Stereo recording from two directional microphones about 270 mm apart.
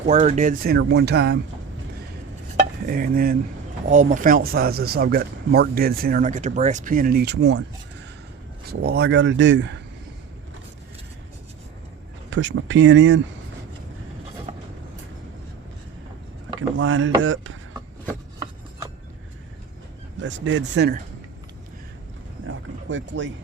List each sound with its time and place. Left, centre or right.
0.1 s speech: right
2.8 s speech: right
8.6 s speech: right
12.3 s speech: right
14.5 s vehicle: right
16.6 s speech: right
20.2 s speech: right
22.4 s a sound: right